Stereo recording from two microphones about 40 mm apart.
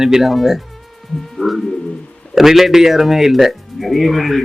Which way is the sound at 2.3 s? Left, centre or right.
Centre.